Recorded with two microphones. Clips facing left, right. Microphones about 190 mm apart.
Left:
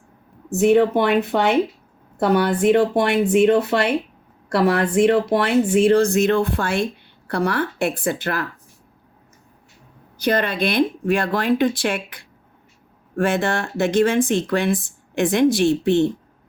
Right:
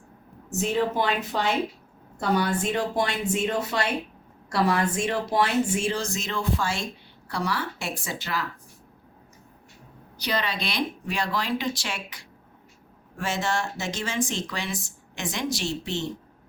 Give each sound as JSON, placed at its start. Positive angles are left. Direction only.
{"t": 0.5, "sound": "speech", "side_deg": 65}
{"t": 10.2, "sound": "speech", "side_deg": 50}